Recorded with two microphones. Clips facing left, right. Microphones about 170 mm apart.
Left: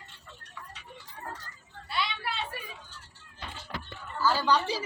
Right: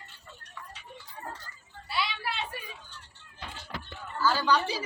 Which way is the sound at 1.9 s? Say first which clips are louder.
Even; centre (ahead or behind).